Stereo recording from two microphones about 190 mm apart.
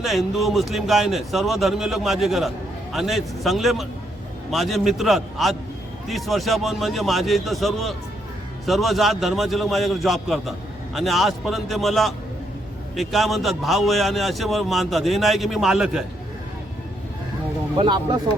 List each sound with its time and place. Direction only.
0.0 s a man's voice: centre (ahead or behind)
17.7 s speech: 25° right (ahead or behind)